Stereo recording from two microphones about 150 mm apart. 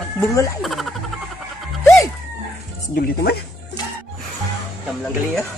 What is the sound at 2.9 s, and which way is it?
Speech, 90° left.